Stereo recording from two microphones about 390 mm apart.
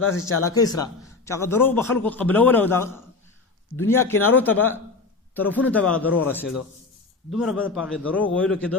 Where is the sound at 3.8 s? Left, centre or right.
Left.